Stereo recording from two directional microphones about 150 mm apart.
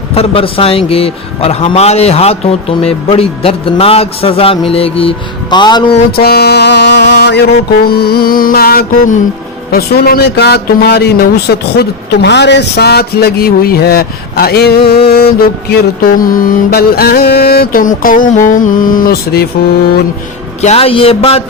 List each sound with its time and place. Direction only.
0.1 s a man's voice: 40° left (ahead or behind)
6.1 s music: 90° left
7.9 s mantra: 90° left; by 9.1 s 75° left (ahead or behind)
9.7 s speech: 90° left
14.8 s mantra: 90° left
20.6 s a man's voice: 45° left (ahead or behind)